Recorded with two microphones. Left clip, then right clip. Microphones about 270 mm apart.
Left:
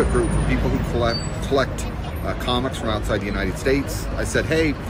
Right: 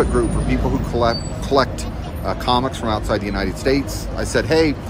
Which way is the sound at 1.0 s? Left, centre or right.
Centre.